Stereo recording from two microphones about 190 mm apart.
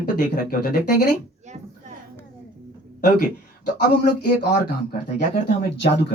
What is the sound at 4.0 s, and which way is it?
Speech, 45° left (ahead or behind).